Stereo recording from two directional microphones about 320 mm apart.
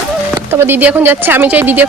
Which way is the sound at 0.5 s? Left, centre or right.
Centre.